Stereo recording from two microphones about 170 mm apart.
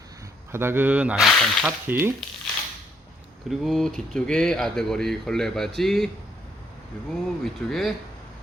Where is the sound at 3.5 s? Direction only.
Centre (ahead or behind).